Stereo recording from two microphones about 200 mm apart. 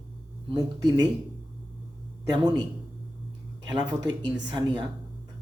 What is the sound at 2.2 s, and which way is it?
Speech, 20° right (ahead or behind).